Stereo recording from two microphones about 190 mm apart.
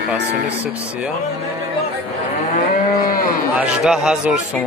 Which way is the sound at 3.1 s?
50° left (ahead or behind).